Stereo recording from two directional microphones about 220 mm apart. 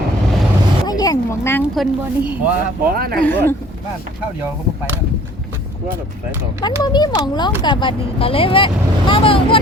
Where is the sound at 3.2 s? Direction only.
10° left (ahead or behind).